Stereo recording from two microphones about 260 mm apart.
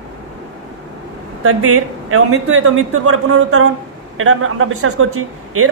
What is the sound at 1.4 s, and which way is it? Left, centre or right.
A man's voice, right.